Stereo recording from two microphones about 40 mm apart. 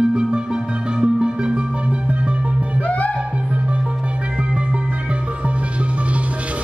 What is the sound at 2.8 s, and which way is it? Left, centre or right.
Music, left.